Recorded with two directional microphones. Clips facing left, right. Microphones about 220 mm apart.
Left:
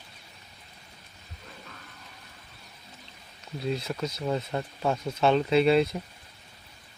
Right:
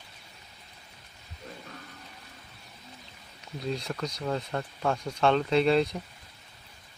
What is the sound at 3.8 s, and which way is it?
Speech, 5° left (ahead or behind).